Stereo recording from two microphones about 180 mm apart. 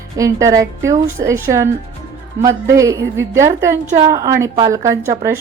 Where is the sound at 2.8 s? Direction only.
15° right (ahead or behind).